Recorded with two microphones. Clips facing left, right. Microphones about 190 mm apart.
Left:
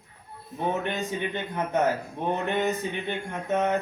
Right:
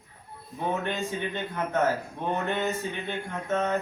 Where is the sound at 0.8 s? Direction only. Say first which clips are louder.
Left 1 dB; 15° left (ahead or behind).